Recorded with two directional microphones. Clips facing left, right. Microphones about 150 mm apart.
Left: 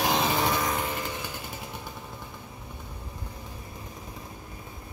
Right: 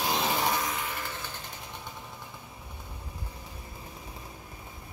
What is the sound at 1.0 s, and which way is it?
Vehicle, 15° left (ahead or behind).